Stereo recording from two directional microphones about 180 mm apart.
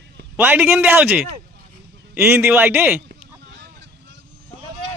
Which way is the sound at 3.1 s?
65° right (ahead or behind).